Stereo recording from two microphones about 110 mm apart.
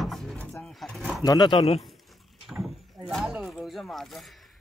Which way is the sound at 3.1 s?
Centre (ahead or behind).